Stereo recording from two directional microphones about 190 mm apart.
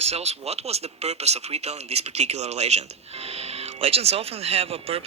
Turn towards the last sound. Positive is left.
turn(degrees=-30)  # may be behind; listen again after turning